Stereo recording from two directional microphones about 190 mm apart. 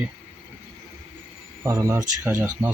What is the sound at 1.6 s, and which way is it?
Speech, 15° right (ahead or behind).